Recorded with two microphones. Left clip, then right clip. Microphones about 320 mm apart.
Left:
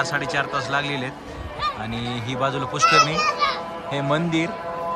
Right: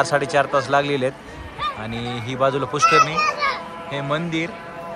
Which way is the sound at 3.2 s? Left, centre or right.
Centre.